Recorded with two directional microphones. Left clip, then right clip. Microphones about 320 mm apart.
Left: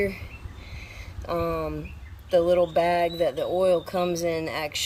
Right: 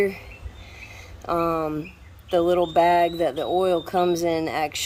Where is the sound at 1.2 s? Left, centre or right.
Centre.